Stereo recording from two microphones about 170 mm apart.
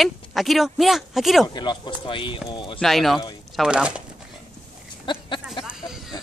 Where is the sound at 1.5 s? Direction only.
25° left (ahead or behind).